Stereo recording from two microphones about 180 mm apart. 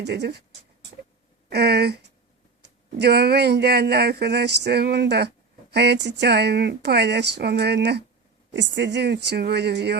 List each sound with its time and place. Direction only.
0.0 s speech: 65° right (ahead or behind)
1.5 s speech: 65° right (ahead or behind)
8.5 s speech: 75° right (ahead or behind)